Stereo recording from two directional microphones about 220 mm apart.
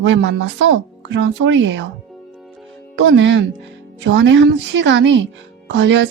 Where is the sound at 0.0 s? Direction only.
55° right (ahead or behind).